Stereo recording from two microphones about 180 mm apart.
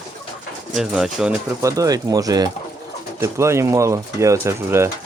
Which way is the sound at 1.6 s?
20° right (ahead or behind).